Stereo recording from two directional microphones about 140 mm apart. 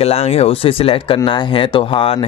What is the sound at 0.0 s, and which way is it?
Speech, 45° left (ahead or behind).